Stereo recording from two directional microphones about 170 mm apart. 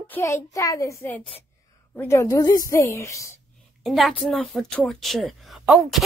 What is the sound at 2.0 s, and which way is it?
A woman's voice, 15° left (ahead or behind).